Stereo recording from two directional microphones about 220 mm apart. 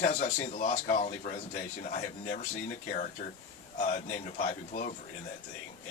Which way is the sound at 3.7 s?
35° left (ahead or behind).